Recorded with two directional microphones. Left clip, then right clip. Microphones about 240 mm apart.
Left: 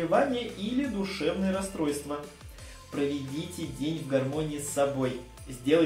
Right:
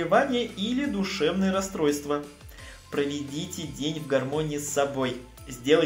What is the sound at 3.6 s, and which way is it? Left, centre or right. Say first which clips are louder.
Speech: right 1 dB; right.